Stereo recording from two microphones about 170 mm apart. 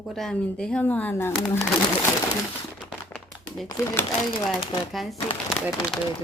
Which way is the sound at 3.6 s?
15° left (ahead or behind).